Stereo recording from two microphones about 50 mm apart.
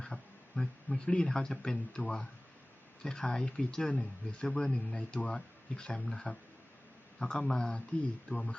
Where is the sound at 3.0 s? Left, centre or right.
Centre.